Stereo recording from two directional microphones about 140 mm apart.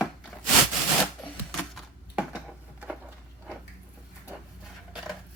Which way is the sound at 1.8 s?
5° right (ahead or behind).